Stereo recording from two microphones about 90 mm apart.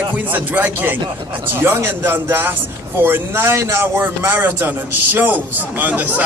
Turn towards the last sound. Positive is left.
turn(degrees=-20)  # may be behind; listen again after turning